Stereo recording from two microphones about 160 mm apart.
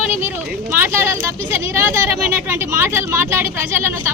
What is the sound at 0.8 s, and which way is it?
Speech, 15° right (ahead or behind).